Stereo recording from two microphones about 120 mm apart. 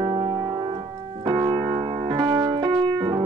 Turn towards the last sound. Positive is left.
turn(degrees=-35)  # may be behind; listen again after turning